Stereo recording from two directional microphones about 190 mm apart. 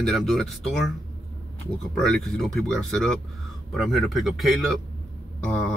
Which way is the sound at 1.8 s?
5° left (ahead or behind).